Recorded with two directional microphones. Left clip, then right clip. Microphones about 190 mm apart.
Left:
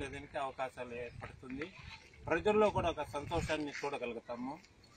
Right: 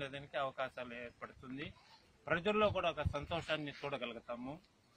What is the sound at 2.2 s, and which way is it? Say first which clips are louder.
A man's voice: left 3 dB; 30° right (ahead or behind).